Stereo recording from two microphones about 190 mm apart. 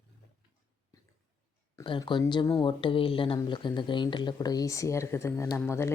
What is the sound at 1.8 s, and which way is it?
Speech, 25° left (ahead or behind).